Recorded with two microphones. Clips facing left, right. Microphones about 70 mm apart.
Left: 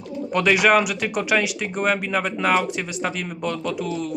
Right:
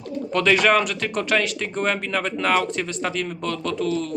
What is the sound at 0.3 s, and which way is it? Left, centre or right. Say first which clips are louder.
Speech: left 1 dB; centre.